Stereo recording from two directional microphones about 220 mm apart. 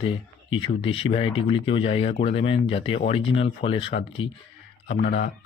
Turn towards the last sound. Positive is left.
turn(degrees=40)  # may be behind; listen again after turning